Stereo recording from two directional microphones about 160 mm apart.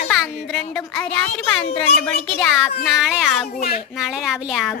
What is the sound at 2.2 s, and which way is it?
A woman's voice, 5° left (ahead or behind).